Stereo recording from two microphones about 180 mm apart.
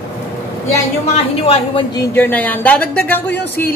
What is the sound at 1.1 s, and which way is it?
Speech, 35° left (ahead or behind).